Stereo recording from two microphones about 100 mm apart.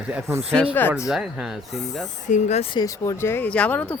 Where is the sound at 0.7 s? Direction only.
20° left (ahead or behind).